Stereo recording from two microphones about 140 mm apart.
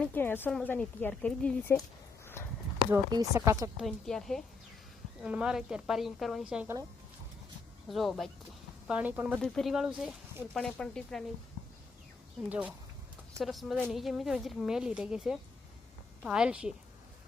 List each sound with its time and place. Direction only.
0.0 s a woman's voice: 15° left (ahead or behind)
2.2 s a sound: 15° left (ahead or behind)
3.1 s speech: 25° right (ahead or behind)
3.8 s a woman's voice: centre (ahead or behind)
7.9 s a woman's voice: centre (ahead or behind)
8.9 s speech: 10° right (ahead or behind)
9.4 s a woman's voice: centre (ahead or behind)
12.5 s a woman's voice: 10° right (ahead or behind)